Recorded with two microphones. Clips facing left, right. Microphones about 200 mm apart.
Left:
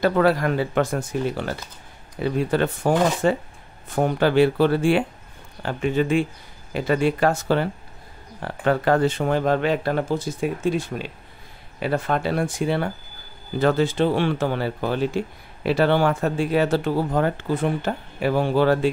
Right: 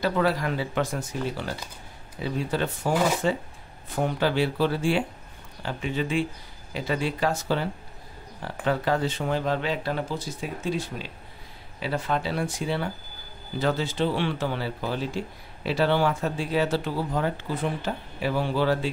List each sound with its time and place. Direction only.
0.0 s speech: 55° left (ahead or behind)